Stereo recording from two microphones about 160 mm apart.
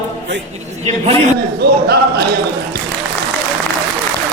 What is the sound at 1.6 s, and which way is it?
Speech, 80° right.